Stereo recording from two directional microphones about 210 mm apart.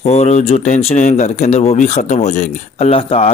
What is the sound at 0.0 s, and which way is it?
Speech, 30° left (ahead or behind).